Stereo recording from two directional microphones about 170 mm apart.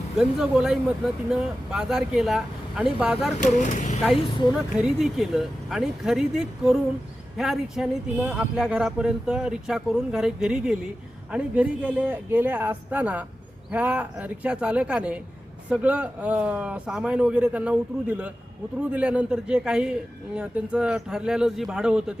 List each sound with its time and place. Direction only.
0.2 s speech: 5° right (ahead or behind)
3.3 s speech: 45° left (ahead or behind)
4.5 s speech: 5° right (ahead or behind)